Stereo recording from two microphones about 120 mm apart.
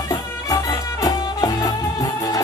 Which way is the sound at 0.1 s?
30° left (ahead or behind).